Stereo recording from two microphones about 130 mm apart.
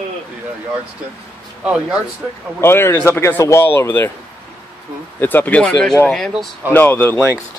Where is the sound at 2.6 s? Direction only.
20° left (ahead or behind).